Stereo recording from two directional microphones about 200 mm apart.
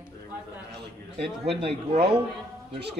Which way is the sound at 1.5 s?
30° right (ahead or behind).